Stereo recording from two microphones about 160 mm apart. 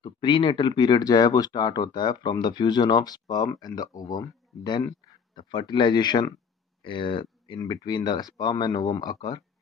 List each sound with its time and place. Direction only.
0.0 s speech: 30° left (ahead or behind)